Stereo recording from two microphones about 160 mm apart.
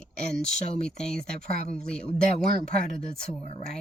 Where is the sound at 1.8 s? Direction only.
5° left (ahead or behind).